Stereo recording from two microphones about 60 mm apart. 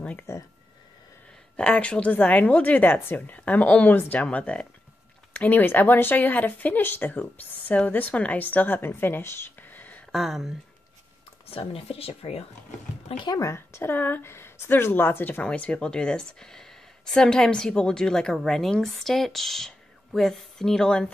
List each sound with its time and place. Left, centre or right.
0.3 s a sound: left
1.6 s a woman's voice: centre
5.3 s speech: left
10.1 s speech: centre
13.4 s speech: left
15.4 s speech: centre